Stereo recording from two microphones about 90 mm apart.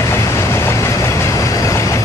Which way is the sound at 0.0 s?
30° left (ahead or behind).